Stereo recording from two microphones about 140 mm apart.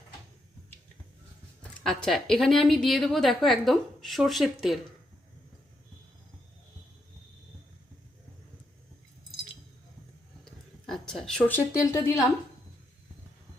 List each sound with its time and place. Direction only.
1.8 s a woman's voice: 5° left (ahead or behind)
10.4 s a sound: 5° left (ahead or behind)
11.8 s a woman's voice: 20° left (ahead or behind)